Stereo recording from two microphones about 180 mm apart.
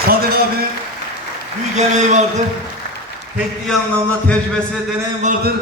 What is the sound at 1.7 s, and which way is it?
Speech, 40° right (ahead or behind).